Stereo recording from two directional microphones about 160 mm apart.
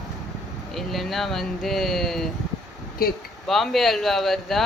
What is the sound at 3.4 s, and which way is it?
Speech, centre (ahead or behind).